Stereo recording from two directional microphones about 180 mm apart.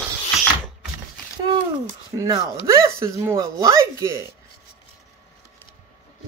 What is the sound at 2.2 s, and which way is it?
Speech, 20° right (ahead or behind).